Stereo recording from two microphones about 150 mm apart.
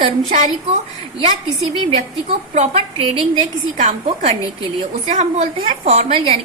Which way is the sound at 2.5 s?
40° right (ahead or behind).